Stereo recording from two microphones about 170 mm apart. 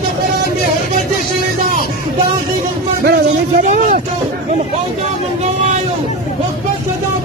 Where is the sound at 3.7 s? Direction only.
50° right (ahead or behind).